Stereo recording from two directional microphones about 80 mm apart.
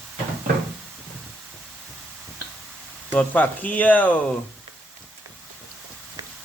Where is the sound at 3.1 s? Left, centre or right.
Left.